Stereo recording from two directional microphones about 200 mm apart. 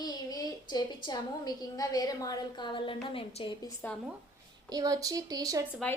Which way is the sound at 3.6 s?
10° left (ahead or behind).